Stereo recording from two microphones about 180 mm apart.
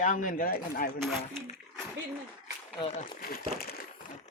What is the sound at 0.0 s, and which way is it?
Speech, 45° left (ahead or behind).